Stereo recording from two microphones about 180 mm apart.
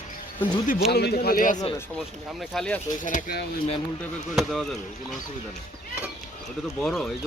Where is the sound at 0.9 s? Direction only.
65° left (ahead or behind).